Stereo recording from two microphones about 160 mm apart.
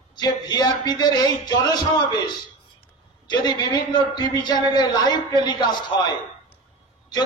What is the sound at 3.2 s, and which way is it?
A man's voice, 25° left (ahead or behind).